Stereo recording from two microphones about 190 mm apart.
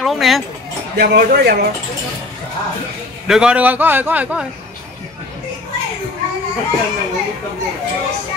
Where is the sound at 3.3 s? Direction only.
5° right (ahead or behind).